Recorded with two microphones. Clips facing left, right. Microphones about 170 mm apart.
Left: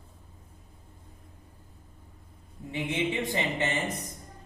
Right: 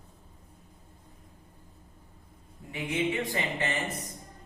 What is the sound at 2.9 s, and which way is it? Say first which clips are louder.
Speech: right 1 dB; 25° left (ahead or behind).